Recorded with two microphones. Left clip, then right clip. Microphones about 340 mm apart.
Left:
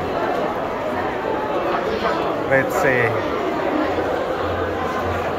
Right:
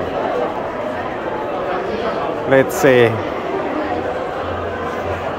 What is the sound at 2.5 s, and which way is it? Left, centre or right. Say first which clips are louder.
Speech: right 6 dB; right.